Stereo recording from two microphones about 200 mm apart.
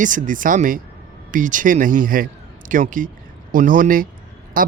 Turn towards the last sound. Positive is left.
turn(degrees=-45)  # may be behind; listen again after turning